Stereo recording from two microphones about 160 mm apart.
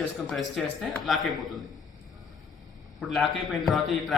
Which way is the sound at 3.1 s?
Centre (ahead or behind).